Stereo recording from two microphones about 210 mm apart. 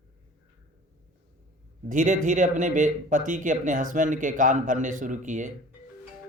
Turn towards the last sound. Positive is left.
turn(degrees=-35)  # may be behind; listen again after turning